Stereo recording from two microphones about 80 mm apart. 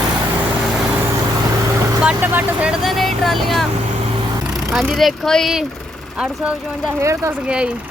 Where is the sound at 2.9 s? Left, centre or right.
Centre.